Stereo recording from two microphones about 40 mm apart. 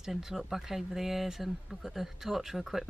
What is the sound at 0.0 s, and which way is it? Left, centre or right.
Speech, centre.